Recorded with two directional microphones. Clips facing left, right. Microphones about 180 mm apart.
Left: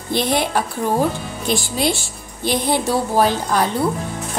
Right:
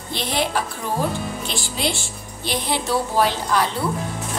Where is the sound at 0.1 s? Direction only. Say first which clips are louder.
Left 5 dB; 50° left (ahead or behind).